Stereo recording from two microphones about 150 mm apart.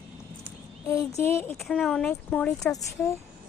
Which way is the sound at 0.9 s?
20° left (ahead or behind).